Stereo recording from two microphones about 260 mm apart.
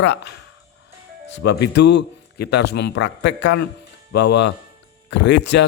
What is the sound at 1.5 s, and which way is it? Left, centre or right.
A man's voice, left.